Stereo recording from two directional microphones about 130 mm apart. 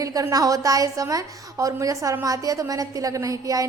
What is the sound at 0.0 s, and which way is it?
A woman's voice, 25° right (ahead or behind).